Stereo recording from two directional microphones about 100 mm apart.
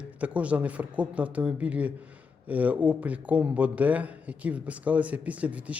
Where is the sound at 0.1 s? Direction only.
15° right (ahead or behind).